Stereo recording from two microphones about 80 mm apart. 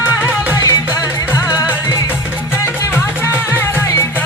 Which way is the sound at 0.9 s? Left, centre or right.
Right.